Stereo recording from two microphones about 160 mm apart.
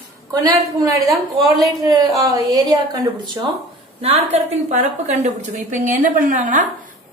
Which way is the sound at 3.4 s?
20° right (ahead or behind).